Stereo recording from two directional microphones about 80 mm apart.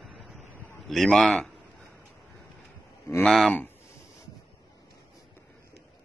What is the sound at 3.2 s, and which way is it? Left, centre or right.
Speech, centre.